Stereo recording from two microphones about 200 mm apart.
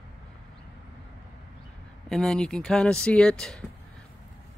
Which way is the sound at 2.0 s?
Centre (ahead or behind).